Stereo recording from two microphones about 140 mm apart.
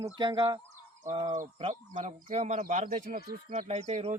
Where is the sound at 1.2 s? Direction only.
65° right (ahead or behind).